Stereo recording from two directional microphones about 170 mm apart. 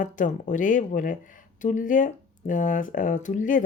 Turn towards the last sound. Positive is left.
turn(degrees=50)  # may be behind; listen again after turning